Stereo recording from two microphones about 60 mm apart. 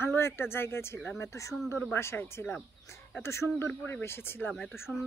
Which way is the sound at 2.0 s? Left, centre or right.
Left.